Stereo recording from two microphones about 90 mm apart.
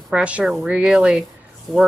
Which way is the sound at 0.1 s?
15° right (ahead or behind).